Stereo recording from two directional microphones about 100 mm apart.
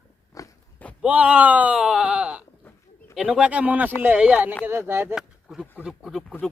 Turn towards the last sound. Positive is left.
turn(degrees=-5)  # may be behind; listen again after turning